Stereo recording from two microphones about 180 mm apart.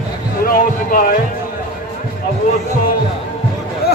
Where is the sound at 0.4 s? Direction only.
50° left (ahead or behind).